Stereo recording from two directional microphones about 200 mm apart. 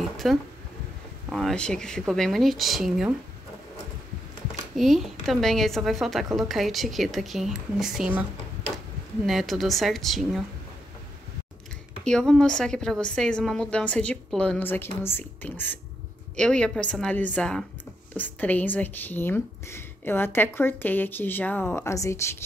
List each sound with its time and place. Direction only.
0.2 s a woman's voice: centre (ahead or behind)
4.7 s a woman's voice: centre (ahead or behind)
12.0 s a woman's voice: 5° left (ahead or behind)